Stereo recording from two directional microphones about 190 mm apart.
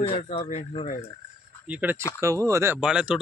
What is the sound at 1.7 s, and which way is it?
Speech, 10° right (ahead or behind).